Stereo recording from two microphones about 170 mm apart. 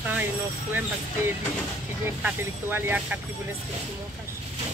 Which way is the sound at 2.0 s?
10° right (ahead or behind).